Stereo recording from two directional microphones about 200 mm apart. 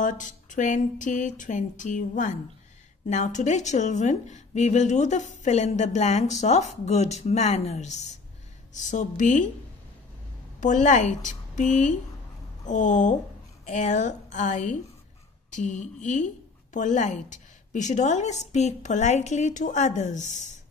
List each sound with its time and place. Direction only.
0.0 s a woman's voice: 40° left (ahead or behind)
10.6 s a woman's voice: 40° left (ahead or behind)